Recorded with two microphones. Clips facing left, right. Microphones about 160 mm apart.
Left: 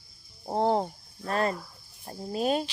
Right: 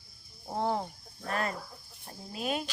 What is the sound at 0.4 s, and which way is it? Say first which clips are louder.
Speech: left 6 dB; 35° left (ahead or behind).